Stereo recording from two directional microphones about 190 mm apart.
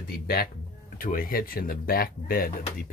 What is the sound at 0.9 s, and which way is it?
Speech, 50° left (ahead or behind).